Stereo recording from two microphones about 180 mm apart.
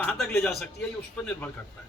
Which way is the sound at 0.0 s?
5° left (ahead or behind).